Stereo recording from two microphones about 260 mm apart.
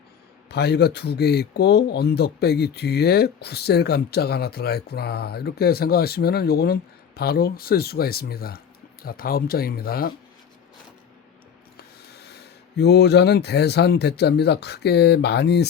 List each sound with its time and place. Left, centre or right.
0.4 s speech: left
11.8 s speech: left